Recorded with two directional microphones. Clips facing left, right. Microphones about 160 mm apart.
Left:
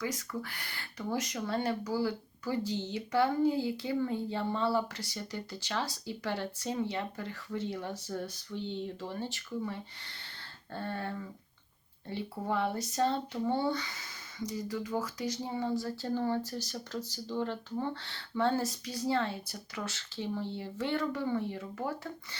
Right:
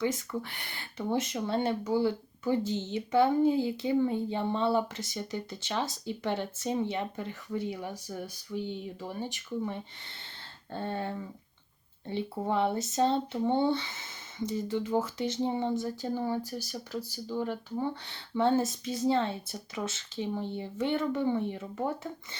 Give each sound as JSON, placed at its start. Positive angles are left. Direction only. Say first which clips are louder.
{"t": 0.0, "sound": "speech", "louder": "right 5 dB", "side_deg": -25}